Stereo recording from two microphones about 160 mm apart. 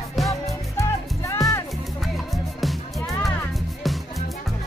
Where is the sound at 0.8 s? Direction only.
20° left (ahead or behind).